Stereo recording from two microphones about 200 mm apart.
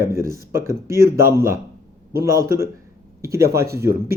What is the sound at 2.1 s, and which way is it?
Speech, 45° right (ahead or behind).